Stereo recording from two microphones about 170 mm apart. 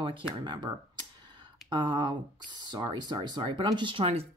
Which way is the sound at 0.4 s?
25° right (ahead or behind).